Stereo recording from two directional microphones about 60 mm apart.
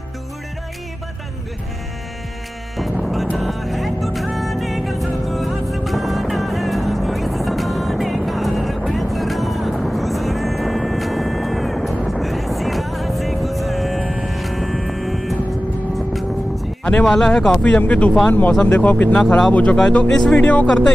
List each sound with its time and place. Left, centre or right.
2.8 s music: centre
16.8 s speech: centre
17.6 s speech: left
19.1 s speech: centre
19.5 s speech: left
20.6 s speech: centre